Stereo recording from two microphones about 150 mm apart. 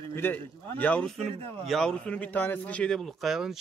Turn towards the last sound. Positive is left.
turn(degrees=0)  # may be behind; listen again after turning